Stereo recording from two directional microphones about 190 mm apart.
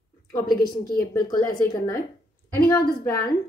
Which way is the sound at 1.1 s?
20° left (ahead or behind).